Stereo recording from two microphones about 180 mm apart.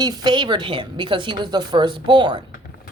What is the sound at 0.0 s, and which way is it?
A woman's voice, 25° right (ahead or behind).